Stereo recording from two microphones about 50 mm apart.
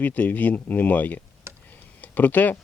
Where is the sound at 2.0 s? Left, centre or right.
Left.